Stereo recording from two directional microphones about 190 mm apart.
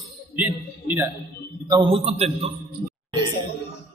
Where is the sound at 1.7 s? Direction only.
25° right (ahead or behind).